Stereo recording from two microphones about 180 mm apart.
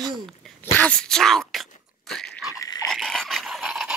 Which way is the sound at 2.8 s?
Centre (ahead or behind).